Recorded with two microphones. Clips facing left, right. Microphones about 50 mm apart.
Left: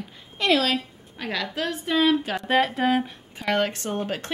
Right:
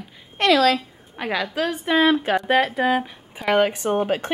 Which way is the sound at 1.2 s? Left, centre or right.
Centre.